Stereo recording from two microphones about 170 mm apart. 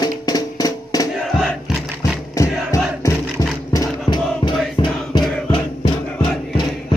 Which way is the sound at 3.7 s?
25° left (ahead or behind).